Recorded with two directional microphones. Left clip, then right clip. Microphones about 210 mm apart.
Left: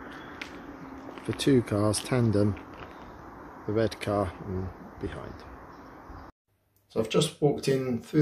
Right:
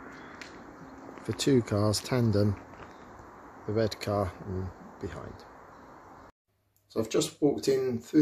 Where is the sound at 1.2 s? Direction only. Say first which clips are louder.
Left 2 dB; 20° right (ahead or behind).